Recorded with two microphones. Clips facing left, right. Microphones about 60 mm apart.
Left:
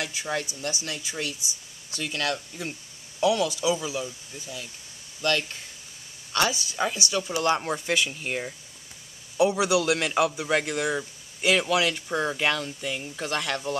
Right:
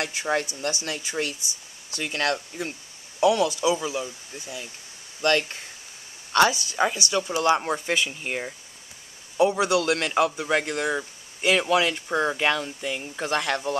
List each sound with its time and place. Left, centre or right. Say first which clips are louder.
0.0 s speech: right 4 dB; right
3.2 s speech: right 3 dB; centre
5.2 s speech: right 4 dB; right
7.2 s speech: right 3 dB; centre
9.4 s a man's voice: right 1 dB; centre
11.0 s speech: right 1 dB; centre